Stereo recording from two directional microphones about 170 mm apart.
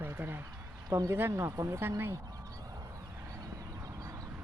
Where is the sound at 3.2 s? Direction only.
20° right (ahead or behind).